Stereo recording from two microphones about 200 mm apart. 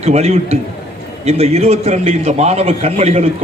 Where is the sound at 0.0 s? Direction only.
30° right (ahead or behind).